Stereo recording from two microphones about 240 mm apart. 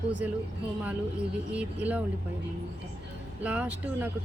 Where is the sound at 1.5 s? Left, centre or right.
Centre.